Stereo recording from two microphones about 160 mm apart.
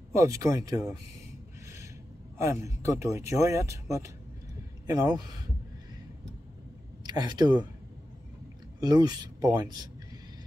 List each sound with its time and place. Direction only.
0.1 s speech: 20° right (ahead or behind)
2.3 s speech: 20° right (ahead or behind)
4.8 s speech: 25° right (ahead or behind)
7.0 s speech: 25° right (ahead or behind)
8.7 s speech: 25° right (ahead or behind)